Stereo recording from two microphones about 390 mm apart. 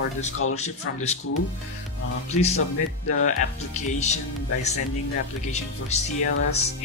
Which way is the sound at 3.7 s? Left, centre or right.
Centre.